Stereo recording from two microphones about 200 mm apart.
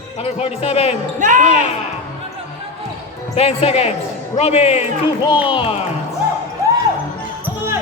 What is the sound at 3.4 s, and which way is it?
Speech, 30° left (ahead or behind).